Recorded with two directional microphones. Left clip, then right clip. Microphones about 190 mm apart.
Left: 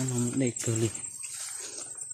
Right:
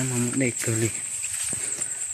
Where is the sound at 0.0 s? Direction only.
5° right (ahead or behind).